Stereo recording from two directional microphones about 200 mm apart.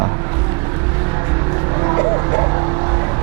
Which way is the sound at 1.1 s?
20° right (ahead or behind).